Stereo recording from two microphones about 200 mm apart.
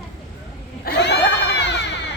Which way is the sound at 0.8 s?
60° left (ahead or behind).